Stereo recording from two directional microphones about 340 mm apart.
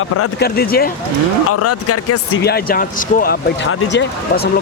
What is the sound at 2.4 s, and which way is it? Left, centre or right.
Speech, left.